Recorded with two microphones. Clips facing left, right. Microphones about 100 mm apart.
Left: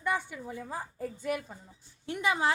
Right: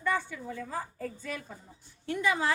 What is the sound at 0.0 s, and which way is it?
A woman's voice, 15° left (ahead or behind).